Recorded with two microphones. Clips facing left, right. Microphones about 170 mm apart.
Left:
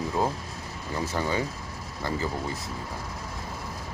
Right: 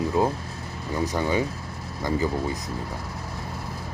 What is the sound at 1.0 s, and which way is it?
Speech, 15° right (ahead or behind).